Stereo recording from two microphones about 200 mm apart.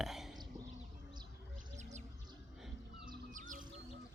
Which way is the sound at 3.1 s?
40° right (ahead or behind).